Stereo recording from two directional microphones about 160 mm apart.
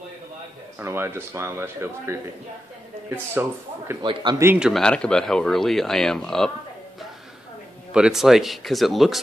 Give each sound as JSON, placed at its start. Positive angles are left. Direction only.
{"t": 0.7, "sound": "speech", "side_deg": -15}
{"t": 4.0, "sound": "speech", "side_deg": -30}
{"t": 4.4, "sound": "speech", "side_deg": -15}
{"t": 4.6, "sound": "speech", "side_deg": 5}
{"t": 7.9, "sound": "speech", "side_deg": -5}